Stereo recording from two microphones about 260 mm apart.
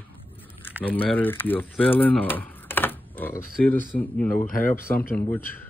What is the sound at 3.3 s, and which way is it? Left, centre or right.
Speech, left.